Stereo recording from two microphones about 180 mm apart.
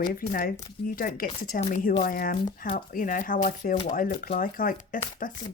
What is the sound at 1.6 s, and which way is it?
Speech, 40° left (ahead or behind).